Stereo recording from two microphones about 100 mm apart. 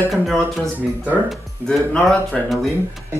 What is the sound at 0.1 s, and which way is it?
Speech, centre (ahead or behind).